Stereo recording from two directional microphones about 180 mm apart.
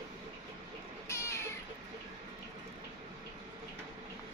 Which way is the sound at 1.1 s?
15° left (ahead or behind).